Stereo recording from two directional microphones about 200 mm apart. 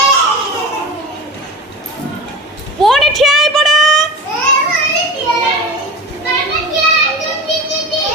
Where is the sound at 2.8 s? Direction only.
Centre (ahead or behind).